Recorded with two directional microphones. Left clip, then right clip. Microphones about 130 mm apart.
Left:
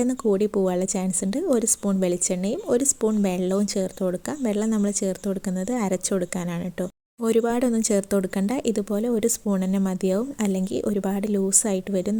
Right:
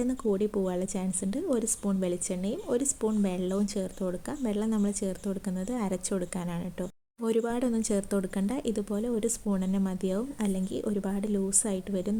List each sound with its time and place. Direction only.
0.0 s a woman's voice: 45° left (ahead or behind)